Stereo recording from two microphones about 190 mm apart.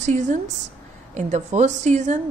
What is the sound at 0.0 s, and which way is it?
A woman's voice, 40° right (ahead or behind).